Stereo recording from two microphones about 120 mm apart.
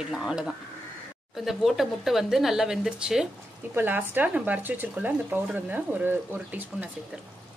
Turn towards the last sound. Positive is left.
turn(degrees=-15)  # may be behind; listen again after turning